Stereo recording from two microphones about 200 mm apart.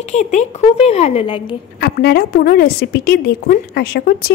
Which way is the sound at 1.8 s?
55° left (ahead or behind).